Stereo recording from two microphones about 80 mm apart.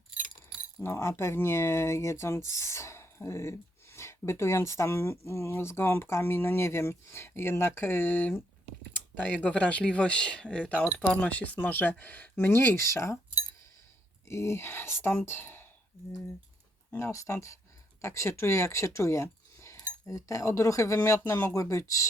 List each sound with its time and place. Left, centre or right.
0.8 s speech: left
9.2 s speech: centre; by 13.1 s left
14.3 s speech: left
16.9 s speech: left